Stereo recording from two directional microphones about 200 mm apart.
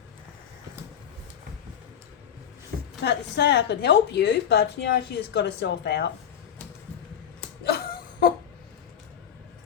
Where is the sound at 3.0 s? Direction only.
55° left (ahead or behind).